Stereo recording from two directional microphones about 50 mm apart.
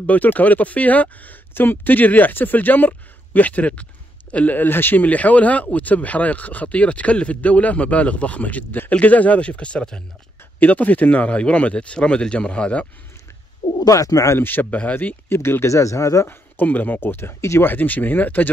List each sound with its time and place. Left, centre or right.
0.0 s speech: left
4.6 s speech: left
5.0 s speech: left
10.6 s speech: left
13.6 s bird: left
14.4 s speech: left
15.2 s speech: left
15.6 s speech: left
16.3 s speech: left
17.6 s speech: left